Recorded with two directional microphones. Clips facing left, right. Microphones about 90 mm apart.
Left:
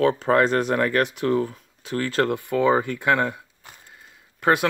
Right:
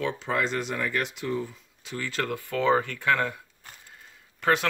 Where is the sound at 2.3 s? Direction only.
20° left (ahead or behind).